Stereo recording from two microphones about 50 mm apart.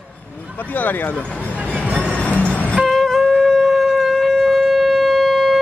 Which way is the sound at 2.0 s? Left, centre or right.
Left.